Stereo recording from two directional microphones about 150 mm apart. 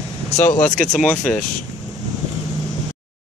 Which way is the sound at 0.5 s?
55° left (ahead or behind).